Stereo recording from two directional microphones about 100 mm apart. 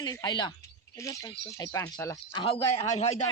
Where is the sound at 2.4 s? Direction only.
85° left.